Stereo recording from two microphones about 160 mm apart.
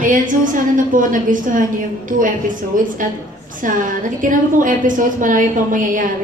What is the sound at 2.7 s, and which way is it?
Speech, 55° right (ahead or behind).